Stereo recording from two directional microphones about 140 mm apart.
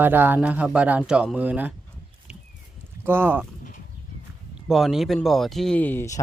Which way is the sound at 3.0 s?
15° right (ahead or behind).